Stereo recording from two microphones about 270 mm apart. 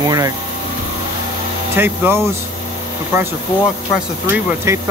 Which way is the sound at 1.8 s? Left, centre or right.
Centre.